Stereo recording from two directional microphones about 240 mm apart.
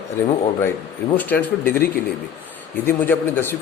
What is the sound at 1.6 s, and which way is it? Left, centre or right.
Speech, left.